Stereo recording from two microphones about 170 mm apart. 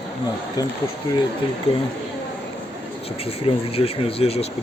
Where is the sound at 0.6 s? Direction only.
25° left (ahead or behind).